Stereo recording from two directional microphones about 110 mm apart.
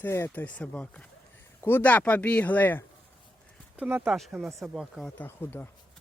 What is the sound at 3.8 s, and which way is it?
Speech, 15° right (ahead or behind).